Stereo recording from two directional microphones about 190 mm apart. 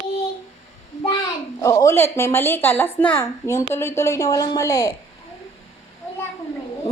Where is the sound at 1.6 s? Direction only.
15° left (ahead or behind).